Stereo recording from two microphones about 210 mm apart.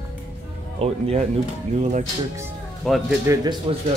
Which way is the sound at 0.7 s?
30° right (ahead or behind).